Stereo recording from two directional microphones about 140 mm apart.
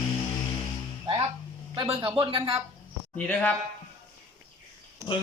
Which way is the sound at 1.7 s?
40° right (ahead or behind).